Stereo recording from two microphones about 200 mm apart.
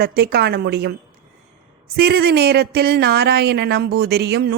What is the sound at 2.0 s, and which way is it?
Speech, 50° right (ahead or behind).